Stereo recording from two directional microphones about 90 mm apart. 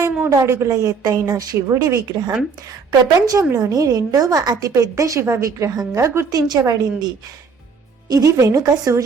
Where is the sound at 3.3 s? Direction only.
40° right (ahead or behind).